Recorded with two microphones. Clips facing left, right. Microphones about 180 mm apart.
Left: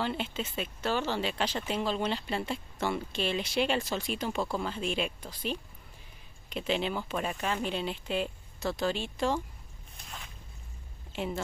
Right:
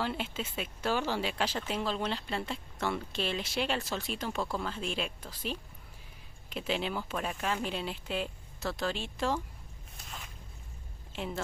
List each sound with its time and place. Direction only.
0.0 s speech: 5° right (ahead or behind)